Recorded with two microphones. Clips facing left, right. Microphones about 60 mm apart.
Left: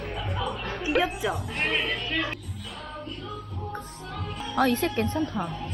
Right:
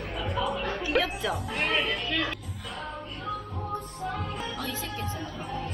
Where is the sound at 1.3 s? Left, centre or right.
Centre.